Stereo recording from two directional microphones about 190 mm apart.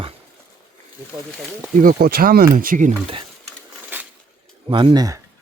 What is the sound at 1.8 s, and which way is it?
Speech, 50° right (ahead or behind).